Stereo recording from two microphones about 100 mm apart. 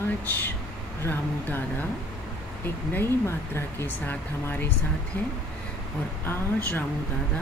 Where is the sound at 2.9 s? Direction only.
25° left (ahead or behind).